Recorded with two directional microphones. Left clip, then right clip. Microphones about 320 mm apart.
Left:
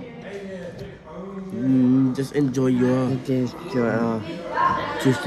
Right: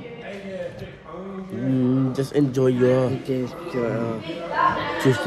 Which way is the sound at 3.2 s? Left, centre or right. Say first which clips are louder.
Left 1 dB; centre.